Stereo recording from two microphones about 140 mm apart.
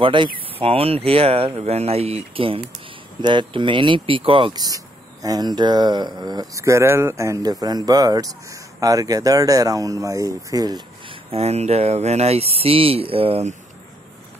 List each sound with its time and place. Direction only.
0.0 s speech: 35° right (ahead or behind)
4.6 s speech: 25° right (ahead or behind)
11.2 s speech: 50° right (ahead or behind)